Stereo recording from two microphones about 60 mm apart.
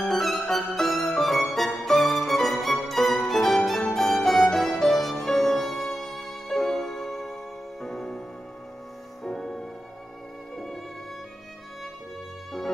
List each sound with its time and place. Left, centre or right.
0.0 s music: centre
9.2 s music: centre